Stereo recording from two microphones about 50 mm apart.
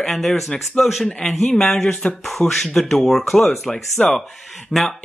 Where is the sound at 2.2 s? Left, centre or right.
Centre.